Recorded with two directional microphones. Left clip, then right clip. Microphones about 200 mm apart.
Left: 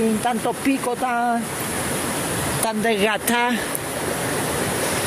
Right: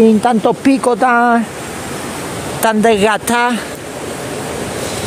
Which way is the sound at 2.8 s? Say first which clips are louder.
Right 8 dB; 30° right (ahead or behind).